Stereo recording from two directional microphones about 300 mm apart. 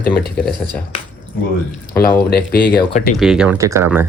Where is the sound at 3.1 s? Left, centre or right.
Centre.